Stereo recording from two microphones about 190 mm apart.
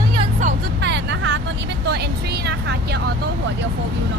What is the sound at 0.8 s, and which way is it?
Vehicle, 65° right (ahead or behind).